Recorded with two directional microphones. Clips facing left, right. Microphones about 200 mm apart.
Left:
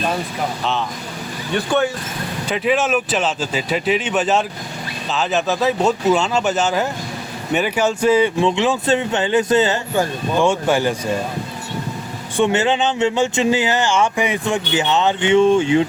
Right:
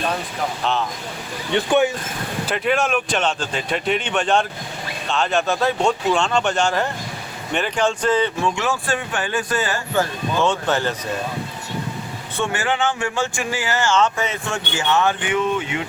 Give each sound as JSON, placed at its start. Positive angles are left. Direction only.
{"t": 0.6, "sound": "speech", "side_deg": 0}
{"t": 1.5, "sound": "speech", "side_deg": -15}
{"t": 2.5, "sound": "speech", "side_deg": 0}
{"t": 8.4, "sound": "speech", "side_deg": 20}
{"t": 12.4, "sound": "speech", "side_deg": 20}